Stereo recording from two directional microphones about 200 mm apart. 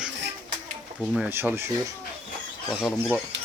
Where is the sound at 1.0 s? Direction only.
10° right (ahead or behind).